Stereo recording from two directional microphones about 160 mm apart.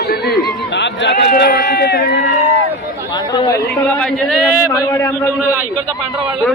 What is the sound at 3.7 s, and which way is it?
Speech, 5° left (ahead or behind).